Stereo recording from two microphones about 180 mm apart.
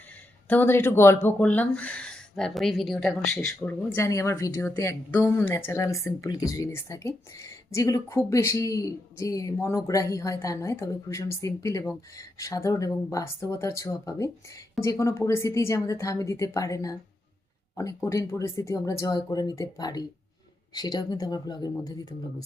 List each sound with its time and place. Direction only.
0.4 s speech: 10° left (ahead or behind)
3.9 s speech: 15° left (ahead or behind)